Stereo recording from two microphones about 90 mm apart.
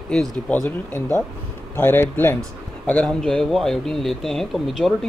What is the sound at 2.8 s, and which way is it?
Speech, 10° left (ahead or behind).